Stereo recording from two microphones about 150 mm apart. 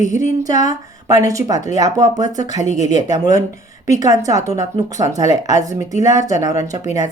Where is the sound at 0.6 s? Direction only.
25° right (ahead or behind).